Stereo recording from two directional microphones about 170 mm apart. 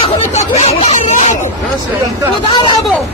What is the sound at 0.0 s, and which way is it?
Speech, 45° left (ahead or behind).